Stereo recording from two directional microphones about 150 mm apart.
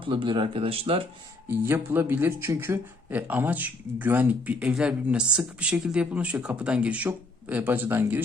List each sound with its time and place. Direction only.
0.0 s speech: 35° right (ahead or behind)
1.5 s speech: 15° right (ahead or behind)